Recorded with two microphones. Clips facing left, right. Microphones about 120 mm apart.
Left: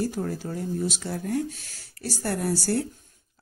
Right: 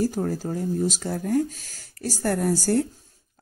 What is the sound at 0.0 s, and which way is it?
Speech, 40° right (ahead or behind).